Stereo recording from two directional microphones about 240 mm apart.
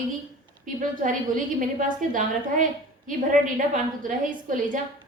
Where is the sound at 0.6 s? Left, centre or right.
Right.